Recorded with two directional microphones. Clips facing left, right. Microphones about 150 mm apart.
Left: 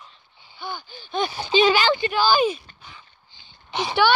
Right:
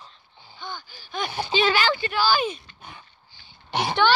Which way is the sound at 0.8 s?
25° left (ahead or behind).